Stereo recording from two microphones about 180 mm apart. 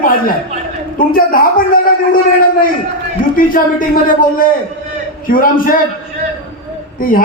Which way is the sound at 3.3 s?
50° left (ahead or behind).